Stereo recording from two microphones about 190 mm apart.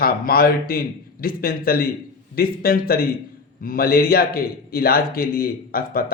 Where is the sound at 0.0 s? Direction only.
50° left (ahead or behind).